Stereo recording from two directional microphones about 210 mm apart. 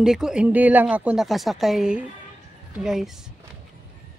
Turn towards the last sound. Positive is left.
turn(degrees=0)  # may be behind; listen again after turning